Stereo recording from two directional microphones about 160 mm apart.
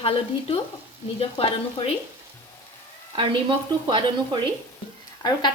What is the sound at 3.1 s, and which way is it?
Frying, 30° right (ahead or behind).